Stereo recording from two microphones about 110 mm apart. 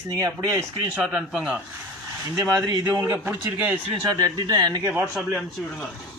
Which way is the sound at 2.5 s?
30° right (ahead or behind).